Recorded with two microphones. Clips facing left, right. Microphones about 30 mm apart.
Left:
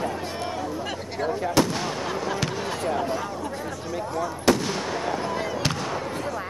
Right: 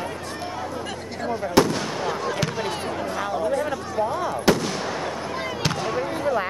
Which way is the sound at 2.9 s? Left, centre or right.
Centre.